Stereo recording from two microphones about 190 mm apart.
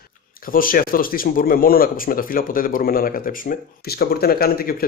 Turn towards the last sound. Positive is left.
turn(degrees=50)  # may be behind; listen again after turning